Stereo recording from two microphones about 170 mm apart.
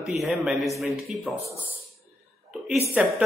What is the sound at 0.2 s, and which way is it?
A woman's voice, centre (ahead or behind).